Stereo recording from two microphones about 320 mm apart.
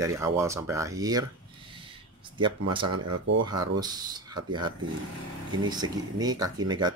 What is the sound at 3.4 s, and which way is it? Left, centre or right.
Speech, centre.